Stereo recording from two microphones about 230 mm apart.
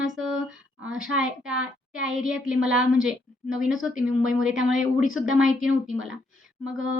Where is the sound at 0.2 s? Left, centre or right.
Centre.